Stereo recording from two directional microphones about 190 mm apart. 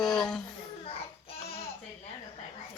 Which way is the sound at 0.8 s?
30° left (ahead or behind).